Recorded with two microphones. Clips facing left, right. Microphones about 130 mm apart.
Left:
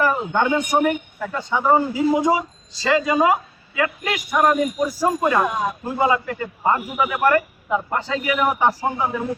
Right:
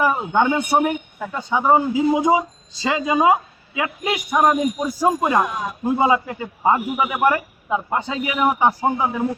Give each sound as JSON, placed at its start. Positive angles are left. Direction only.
{"t": 0.0, "sound": "a man's voice", "side_deg": -10}